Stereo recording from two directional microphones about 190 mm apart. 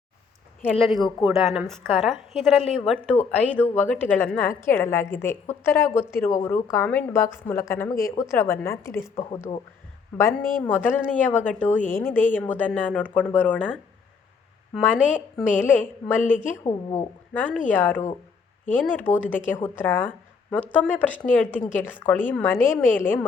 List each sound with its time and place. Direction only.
0.6 s a woman's voice: 5° left (ahead or behind)
10.1 s a woman's voice: 10° left (ahead or behind)
15.8 s a woman's voice: 10° left (ahead or behind)
16.2 s a woman's voice: 45° left (ahead or behind)
16.6 s a woman's voice: 15° left (ahead or behind)